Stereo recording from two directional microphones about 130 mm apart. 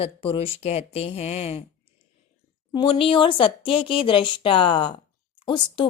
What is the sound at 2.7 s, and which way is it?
A woman's voice, 45° left (ahead or behind).